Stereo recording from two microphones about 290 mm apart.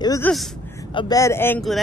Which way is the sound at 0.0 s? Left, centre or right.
Centre.